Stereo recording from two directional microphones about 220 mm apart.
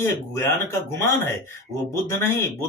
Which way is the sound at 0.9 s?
10° left (ahead or behind).